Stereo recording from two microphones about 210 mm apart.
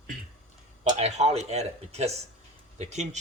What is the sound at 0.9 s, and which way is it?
Speech, 30° right (ahead or behind).